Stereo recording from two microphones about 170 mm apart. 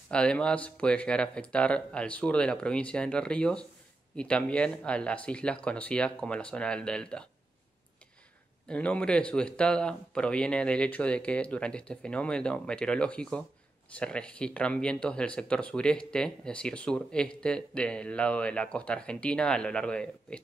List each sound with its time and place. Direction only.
0.1 s speech: 5° left (ahead or behind)
8.6 s speech: 5° left (ahead or behind)